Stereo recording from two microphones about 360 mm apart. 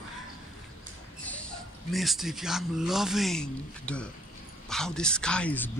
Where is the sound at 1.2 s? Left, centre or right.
Centre.